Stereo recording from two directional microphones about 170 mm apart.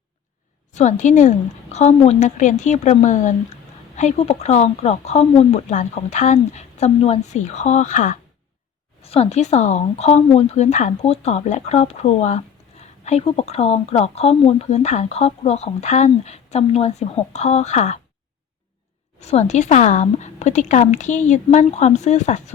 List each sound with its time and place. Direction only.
0.7 s a woman's voice: 45° left (ahead or behind)
19.2 s a woman's voice: 40° left (ahead or behind)